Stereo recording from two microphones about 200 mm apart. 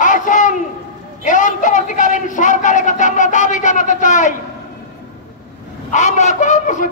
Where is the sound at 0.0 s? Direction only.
40° left (ahead or behind).